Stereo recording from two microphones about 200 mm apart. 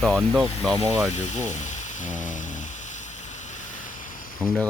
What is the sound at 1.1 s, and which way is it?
Speech, 35° left (ahead or behind).